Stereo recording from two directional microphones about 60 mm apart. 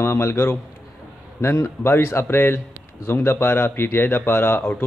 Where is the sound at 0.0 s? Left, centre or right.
Left.